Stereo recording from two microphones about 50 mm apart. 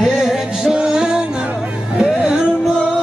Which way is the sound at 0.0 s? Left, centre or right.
Centre.